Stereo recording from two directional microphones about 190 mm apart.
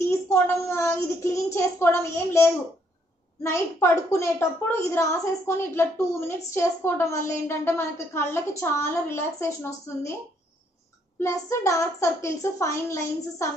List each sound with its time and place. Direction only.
0.3 s a woman's voice: 15° left (ahead or behind)
11.1 s a woman's voice: 15° left (ahead or behind)